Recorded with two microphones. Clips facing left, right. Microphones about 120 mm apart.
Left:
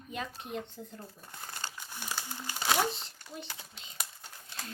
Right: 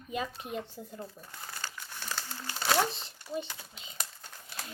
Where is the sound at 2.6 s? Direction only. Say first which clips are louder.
Right 1 dB; 5° left (ahead or behind).